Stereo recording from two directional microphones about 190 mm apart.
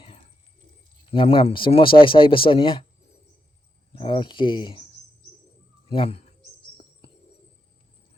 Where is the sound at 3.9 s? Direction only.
25° left (ahead or behind).